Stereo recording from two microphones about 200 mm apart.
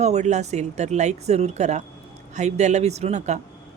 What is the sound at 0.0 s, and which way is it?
Speech, 35° right (ahead or behind).